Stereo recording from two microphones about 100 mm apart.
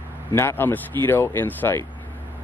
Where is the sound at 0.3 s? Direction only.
25° left (ahead or behind).